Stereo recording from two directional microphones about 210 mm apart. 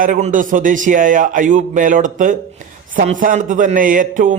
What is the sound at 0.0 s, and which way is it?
A man's voice, 40° right (ahead or behind).